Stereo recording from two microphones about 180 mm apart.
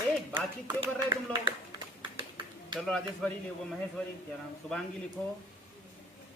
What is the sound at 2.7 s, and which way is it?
Speech, 5° left (ahead or behind).